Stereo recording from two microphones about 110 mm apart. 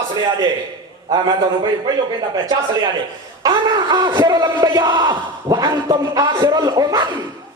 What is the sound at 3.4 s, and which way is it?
Speech, 40° right (ahead or behind).